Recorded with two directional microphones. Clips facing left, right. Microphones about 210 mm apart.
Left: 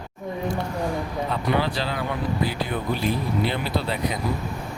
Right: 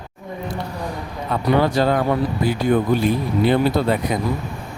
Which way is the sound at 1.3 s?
50° right (ahead or behind).